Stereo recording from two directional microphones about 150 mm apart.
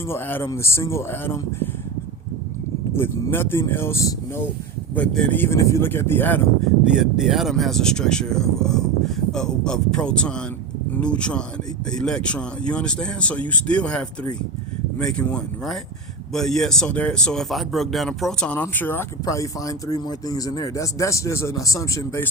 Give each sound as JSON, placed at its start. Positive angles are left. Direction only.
{"t": 0.1, "sound": "speech", "side_deg": 15}
{"t": 2.9, "sound": "speech", "side_deg": 15}
{"t": 6.9, "sound": "speech", "side_deg": -5}